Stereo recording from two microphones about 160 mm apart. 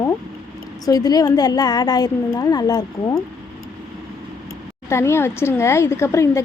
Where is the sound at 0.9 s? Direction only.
25° left (ahead or behind).